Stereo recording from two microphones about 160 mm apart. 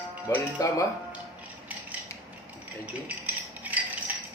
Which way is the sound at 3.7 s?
10° right (ahead or behind).